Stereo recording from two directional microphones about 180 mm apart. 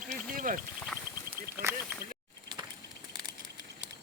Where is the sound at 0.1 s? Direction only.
45° right (ahead or behind).